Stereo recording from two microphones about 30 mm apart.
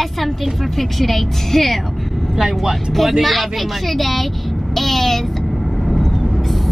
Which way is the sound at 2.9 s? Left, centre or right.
Centre.